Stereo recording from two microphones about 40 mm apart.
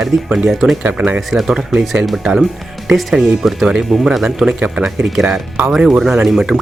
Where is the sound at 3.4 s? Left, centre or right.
Centre.